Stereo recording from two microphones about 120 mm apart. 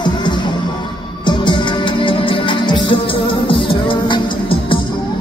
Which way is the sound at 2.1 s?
45° left (ahead or behind).